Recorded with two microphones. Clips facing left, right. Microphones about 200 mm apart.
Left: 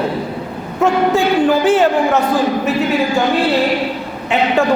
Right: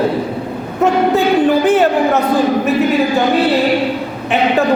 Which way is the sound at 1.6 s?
20° right (ahead or behind).